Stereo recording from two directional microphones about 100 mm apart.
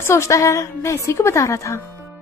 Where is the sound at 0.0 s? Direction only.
25° left (ahead or behind).